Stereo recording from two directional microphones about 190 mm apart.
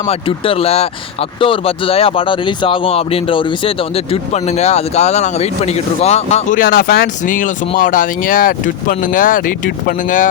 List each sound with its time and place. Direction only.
0.0 s speech: 30° left (ahead or behind)